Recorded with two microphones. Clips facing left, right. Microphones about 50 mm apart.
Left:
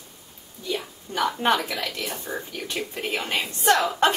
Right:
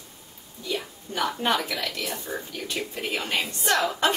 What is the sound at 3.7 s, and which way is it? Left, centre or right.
Speech, centre.